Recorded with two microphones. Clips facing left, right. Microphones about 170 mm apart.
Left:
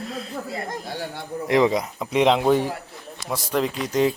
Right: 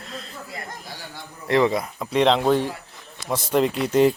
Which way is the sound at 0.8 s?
60° left (ahead or behind).